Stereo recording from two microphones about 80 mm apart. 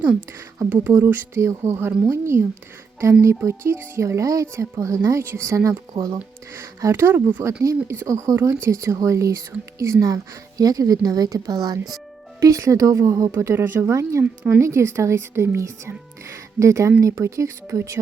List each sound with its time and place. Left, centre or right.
0.7 s speech: right